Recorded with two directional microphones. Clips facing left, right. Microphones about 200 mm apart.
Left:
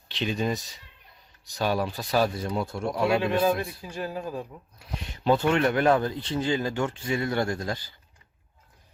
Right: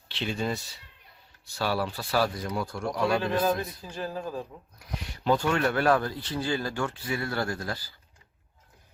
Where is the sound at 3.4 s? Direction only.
10° left (ahead or behind).